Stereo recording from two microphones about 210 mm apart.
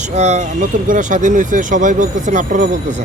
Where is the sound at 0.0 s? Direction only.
35° right (ahead or behind).